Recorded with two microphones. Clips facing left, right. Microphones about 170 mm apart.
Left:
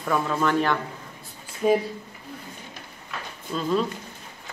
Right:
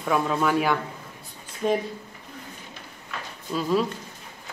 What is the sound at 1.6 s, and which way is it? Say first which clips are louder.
Speech: left 3 dB; 5° left (ahead or behind).